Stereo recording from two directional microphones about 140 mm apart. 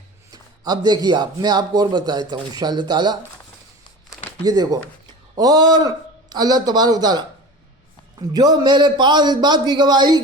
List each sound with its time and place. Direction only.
0.3 s a man's voice: 30° right (ahead or behind)
4.4 s a man's voice: 30° right (ahead or behind)
8.3 s a man's voice: 30° right (ahead or behind)